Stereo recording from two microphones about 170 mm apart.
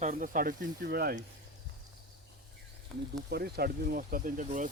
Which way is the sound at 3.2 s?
70° right (ahead or behind).